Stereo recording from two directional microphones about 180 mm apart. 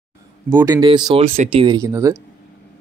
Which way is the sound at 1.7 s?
15° right (ahead or behind).